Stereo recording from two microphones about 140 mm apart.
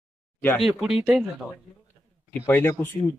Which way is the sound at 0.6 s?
Centre (ahead or behind).